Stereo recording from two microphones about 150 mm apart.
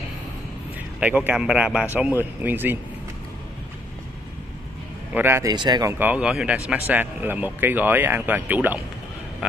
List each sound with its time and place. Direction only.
0.9 s a man's voice: 10° right (ahead or behind)
5.1 s speech: 15° right (ahead or behind)
5.9 s a man's voice: 10° right (ahead or behind)